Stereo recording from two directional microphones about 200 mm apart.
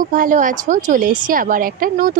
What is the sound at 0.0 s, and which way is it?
A woman's voice, 40° right (ahead or behind).